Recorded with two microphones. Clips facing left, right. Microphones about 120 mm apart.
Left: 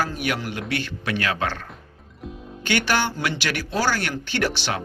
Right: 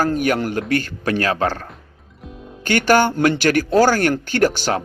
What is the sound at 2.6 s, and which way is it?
A man's voice, 45° right (ahead or behind).